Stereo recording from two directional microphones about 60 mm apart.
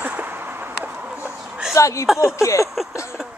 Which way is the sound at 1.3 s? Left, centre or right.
Centre.